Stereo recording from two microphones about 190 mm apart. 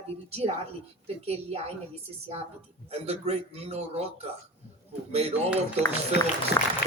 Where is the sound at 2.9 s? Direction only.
30° right (ahead or behind).